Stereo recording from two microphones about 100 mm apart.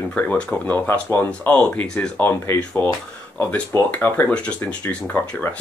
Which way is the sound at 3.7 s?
20° left (ahead or behind).